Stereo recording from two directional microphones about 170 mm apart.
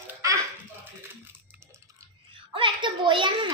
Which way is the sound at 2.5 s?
30° right (ahead or behind).